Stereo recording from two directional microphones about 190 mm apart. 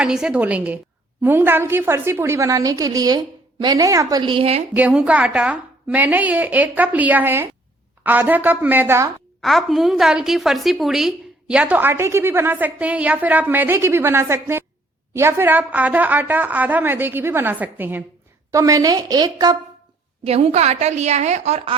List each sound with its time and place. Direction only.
0.0 s a woman's voice: 5° right (ahead or behind); by 4.6 s 30° right (ahead or behind)
4.7 s a woman's voice: 5° right (ahead or behind)
9.4 s a woman's voice: centre (ahead or behind); by 19.5 s 20° right (ahead or behind)
20.2 s a woman's voice: 35° right (ahead or behind)